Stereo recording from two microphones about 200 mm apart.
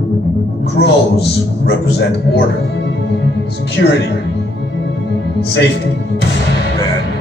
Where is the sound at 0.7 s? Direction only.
55° left (ahead or behind).